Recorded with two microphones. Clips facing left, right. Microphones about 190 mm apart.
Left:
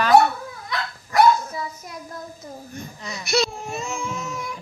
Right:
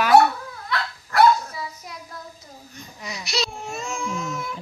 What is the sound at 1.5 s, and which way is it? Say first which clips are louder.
Dog: left 3 dB; 50° left (ahead or behind).